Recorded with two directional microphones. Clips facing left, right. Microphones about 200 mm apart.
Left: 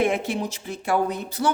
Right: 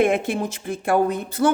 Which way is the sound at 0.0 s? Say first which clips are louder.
Right 3 dB; 55° right (ahead or behind).